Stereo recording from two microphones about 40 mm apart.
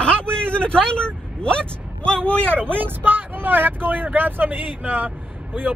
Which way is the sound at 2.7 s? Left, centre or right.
Right.